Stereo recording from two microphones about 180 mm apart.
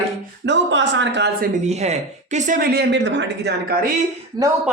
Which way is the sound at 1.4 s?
40° right (ahead or behind).